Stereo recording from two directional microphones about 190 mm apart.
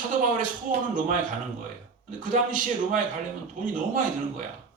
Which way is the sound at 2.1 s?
45° right (ahead or behind).